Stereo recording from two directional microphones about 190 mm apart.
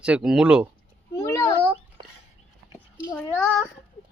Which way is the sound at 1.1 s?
15° left (ahead or behind).